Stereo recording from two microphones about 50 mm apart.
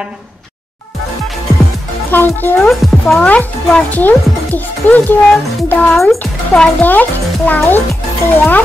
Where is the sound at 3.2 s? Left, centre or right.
Left.